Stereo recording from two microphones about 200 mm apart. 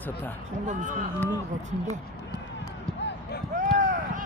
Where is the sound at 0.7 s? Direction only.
40° right (ahead or behind).